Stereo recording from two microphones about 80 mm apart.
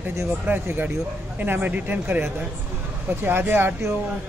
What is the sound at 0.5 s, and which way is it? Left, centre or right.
Speech, right.